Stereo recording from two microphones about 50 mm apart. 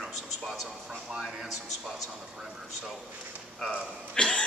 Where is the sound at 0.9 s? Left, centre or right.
Centre.